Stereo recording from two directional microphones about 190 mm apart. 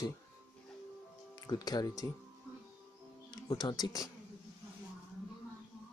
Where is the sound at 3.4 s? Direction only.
20° left (ahead or behind).